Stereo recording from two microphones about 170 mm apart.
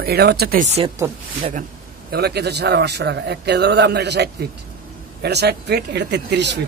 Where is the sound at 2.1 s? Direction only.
70° right (ahead or behind); by 6.5 s 85° right.